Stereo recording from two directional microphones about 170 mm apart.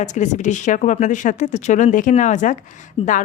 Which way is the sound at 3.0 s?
35° left (ahead or behind).